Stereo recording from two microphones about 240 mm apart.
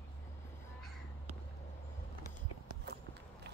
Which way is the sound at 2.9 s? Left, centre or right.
Right.